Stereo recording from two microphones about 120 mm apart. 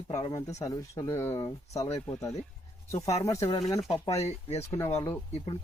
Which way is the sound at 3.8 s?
50° left (ahead or behind).